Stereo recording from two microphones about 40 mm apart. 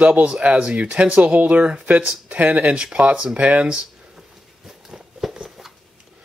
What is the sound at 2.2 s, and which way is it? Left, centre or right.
Speech, right.